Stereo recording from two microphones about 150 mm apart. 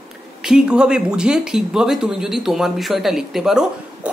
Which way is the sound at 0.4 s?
5° right (ahead or behind).